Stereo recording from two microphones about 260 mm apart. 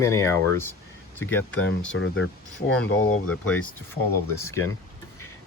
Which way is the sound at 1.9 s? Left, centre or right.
Left.